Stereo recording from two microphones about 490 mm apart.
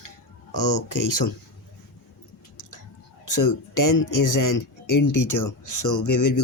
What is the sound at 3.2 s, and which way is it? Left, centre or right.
Speech, left.